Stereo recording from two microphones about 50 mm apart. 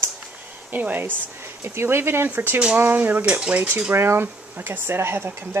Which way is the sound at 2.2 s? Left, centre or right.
Right.